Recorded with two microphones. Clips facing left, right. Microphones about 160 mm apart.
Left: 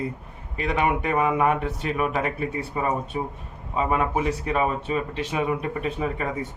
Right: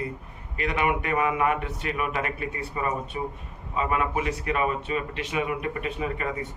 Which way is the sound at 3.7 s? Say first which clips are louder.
Left 3 dB; 35° left (ahead or behind).